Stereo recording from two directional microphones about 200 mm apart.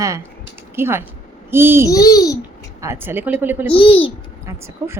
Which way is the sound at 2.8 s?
10° right (ahead or behind).